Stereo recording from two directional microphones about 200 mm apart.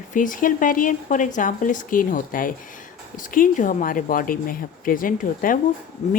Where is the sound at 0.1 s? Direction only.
40° left (ahead or behind).